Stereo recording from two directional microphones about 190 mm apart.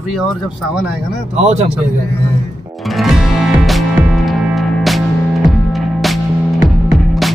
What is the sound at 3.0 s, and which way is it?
Music, centre (ahead or behind).